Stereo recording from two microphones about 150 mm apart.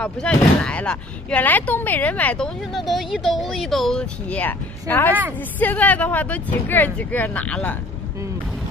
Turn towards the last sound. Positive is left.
turn(degrees=10)  # may be behind; listen again after turning